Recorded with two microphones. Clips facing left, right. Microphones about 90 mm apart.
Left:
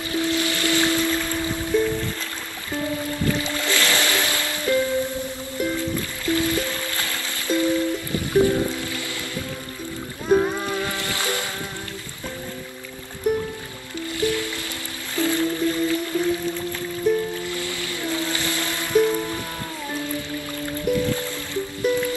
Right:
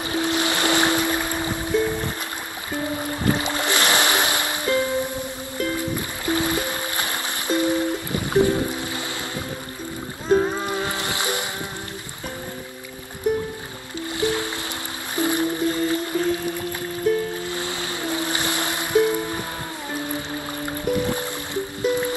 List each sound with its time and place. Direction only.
0.1 s music: 20° right (ahead or behind)
10.2 s music: 5° left (ahead or behind)
10.6 s music: 20° right (ahead or behind)
14.2 s music: 20° right (ahead or behind)